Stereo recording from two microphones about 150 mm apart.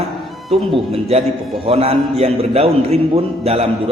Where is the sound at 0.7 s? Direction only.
40° right (ahead or behind).